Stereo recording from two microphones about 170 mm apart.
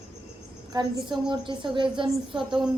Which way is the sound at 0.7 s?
25° right (ahead or behind).